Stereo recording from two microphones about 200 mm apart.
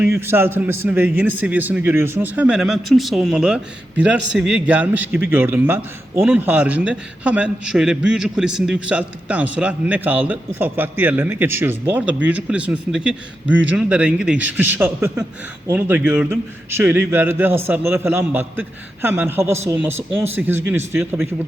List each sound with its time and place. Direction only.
0.0 s a man's voice: 10° right (ahead or behind)